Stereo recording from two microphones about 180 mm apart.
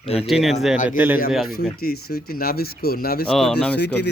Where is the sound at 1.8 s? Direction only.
60° left (ahead or behind).